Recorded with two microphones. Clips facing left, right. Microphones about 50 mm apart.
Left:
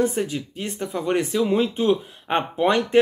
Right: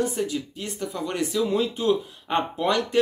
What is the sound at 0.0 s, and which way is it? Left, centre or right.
Speech, left.